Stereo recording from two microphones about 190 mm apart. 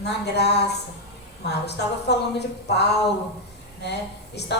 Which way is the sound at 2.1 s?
60° left (ahead or behind).